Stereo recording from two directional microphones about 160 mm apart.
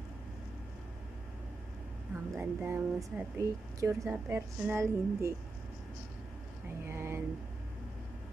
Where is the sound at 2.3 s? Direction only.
15° right (ahead or behind).